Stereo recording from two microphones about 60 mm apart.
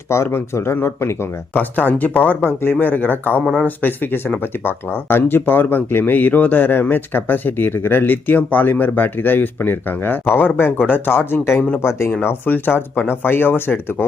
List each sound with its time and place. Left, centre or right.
0.1 s speech: left
1.5 s speech: left
11.8 s speech: left
12.2 s speech: left